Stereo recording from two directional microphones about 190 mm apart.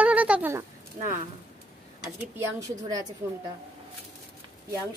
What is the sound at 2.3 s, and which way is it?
Speech, 20° right (ahead or behind).